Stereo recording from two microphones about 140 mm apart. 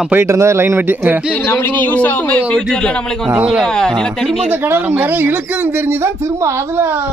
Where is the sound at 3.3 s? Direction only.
5° right (ahead or behind).